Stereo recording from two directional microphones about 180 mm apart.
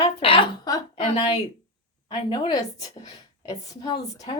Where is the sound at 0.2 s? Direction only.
30° left (ahead or behind).